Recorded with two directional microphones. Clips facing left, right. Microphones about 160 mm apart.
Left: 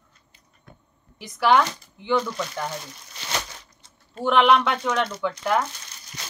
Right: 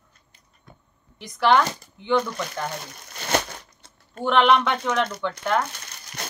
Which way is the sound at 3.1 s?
55° right (ahead or behind).